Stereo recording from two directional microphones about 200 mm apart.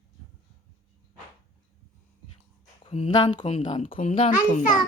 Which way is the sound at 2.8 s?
25° left (ahead or behind).